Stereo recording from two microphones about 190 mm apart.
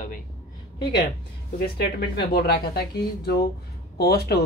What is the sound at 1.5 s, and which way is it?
Speech, 55° left (ahead or behind).